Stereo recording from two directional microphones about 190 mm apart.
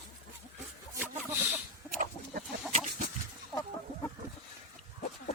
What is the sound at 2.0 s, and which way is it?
Chicken, 45° right (ahead or behind).